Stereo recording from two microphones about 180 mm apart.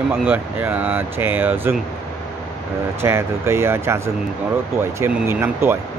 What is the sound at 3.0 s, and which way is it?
Speech, 15° right (ahead or behind).